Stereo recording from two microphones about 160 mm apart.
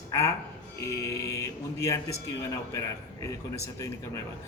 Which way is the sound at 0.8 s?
20° left (ahead or behind).